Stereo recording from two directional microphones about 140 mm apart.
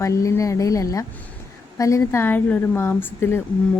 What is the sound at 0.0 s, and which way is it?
A woman's voice, 20° left (ahead or behind).